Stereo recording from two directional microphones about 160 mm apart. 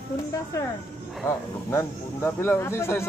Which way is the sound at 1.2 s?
15° left (ahead or behind).